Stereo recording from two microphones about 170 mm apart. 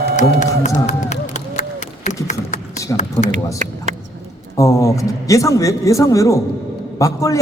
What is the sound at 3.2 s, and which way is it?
Speech, 20° left (ahead or behind).